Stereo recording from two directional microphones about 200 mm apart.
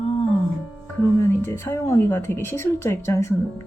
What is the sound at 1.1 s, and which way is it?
Speech, 15° left (ahead or behind).